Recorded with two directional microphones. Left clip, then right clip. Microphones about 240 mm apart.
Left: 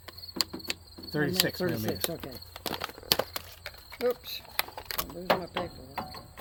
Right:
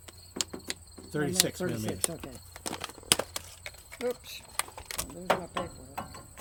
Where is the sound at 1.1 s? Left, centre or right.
Left.